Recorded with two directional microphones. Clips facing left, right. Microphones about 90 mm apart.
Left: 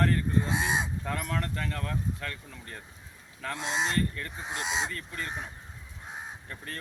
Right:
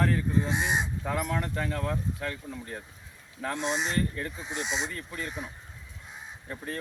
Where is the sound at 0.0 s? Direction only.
5° right (ahead or behind).